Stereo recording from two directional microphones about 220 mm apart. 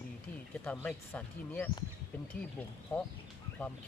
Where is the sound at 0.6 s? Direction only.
5° left (ahead or behind).